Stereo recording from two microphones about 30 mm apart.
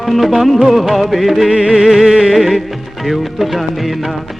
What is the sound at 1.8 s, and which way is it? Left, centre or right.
Music, centre.